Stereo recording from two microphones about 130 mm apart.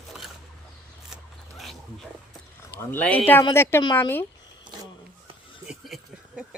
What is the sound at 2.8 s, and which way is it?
Speech, 10° left (ahead or behind).